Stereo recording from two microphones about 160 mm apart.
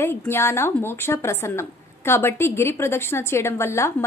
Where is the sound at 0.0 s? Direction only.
15° left (ahead or behind).